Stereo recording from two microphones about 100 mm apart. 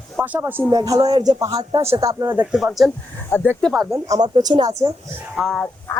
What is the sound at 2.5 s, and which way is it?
Speech, centre (ahead or behind).